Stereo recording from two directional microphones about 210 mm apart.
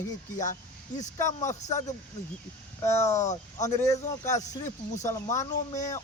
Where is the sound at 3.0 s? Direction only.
35° left (ahead or behind).